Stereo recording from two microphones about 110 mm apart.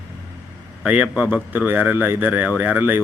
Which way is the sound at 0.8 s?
10° right (ahead or behind).